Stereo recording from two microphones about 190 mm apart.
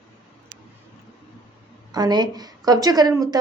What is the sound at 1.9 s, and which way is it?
A woman's voice, 20° right (ahead or behind).